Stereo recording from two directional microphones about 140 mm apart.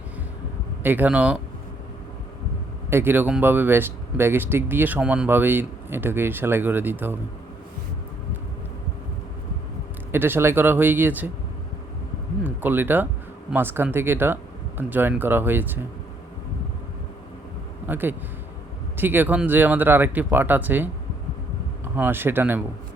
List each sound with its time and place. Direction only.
0.8 s speech: 15° right (ahead or behind)
2.9 s speech: 15° right (ahead or behind)
10.1 s speech: 15° right (ahead or behind)
12.4 s speech: 15° right (ahead or behind)
17.8 s speech: 15° right (ahead or behind)
21.9 s speech: 15° right (ahead or behind)